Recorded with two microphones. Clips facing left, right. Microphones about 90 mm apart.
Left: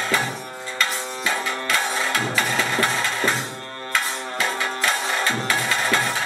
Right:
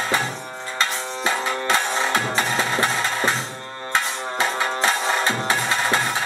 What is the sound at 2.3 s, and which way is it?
Music, 30° right (ahead or behind).